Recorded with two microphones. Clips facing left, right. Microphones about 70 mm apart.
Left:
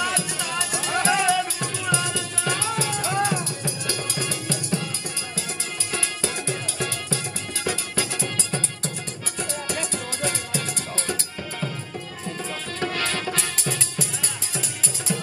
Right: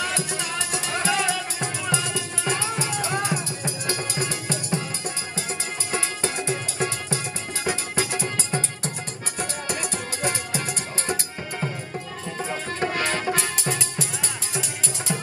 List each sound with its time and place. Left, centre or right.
0.0 s music: right
1.0 s music: left
1.6 s music: right
5.9 s music: right
12.4 s music: right
15.1 s music: right